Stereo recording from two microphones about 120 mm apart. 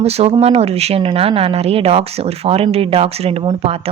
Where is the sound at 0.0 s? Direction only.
60° right (ahead or behind).